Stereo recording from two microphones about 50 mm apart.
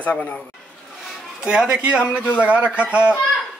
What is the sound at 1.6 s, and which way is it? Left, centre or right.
A man's voice, centre.